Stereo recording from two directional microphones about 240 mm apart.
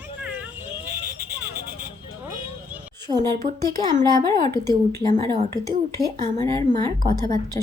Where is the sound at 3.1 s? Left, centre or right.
Right.